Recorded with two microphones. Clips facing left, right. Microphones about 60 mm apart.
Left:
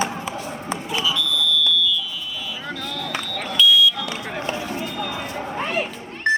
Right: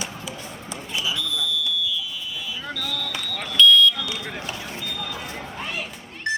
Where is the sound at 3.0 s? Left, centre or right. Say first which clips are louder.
Left 3 dB; left.